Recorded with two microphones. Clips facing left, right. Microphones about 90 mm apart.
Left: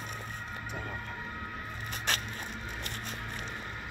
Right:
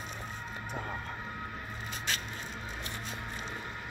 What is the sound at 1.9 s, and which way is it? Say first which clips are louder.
Printer: left 3 dB; 55° left (ahead or behind).